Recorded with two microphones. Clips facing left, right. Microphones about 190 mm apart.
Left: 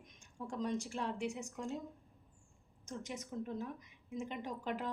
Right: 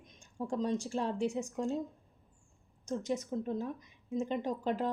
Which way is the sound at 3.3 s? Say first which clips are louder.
Right 6 dB; 35° right (ahead or behind).